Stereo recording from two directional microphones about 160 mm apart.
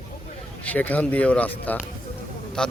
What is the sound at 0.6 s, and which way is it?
A man's voice, 10° left (ahead or behind).